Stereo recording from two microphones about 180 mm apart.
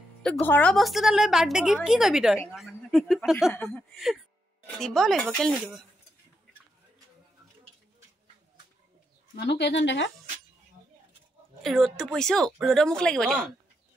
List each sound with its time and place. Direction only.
0.2 s speech: 10° left (ahead or behind)
9.3 s speech: 70° left (ahead or behind); by 10.1 s 90° left
11.6 s speech: centre (ahead or behind)